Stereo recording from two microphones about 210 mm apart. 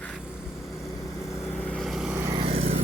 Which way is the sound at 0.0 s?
10° left (ahead or behind).